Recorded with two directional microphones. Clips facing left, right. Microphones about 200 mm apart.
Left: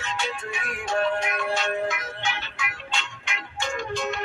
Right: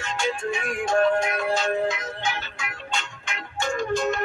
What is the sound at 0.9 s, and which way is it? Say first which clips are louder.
Music: right 4 dB; 45° right (ahead or behind).